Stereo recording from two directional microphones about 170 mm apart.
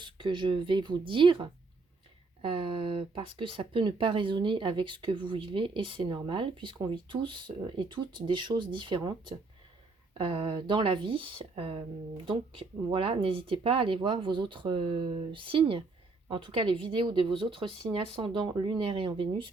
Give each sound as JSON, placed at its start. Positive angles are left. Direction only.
{"t": 0.0, "sound": "speech", "side_deg": -30}
{"t": 2.5, "sound": "speech", "side_deg": -30}